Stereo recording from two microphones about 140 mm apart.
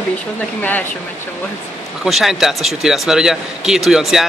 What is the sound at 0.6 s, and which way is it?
Speech, 10° left (ahead or behind).